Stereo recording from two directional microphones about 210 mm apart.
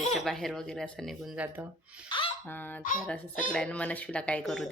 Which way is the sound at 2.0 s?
25° left (ahead or behind).